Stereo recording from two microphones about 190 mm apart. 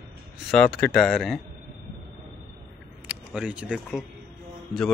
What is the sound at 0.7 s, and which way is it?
Speech, 5° left (ahead or behind).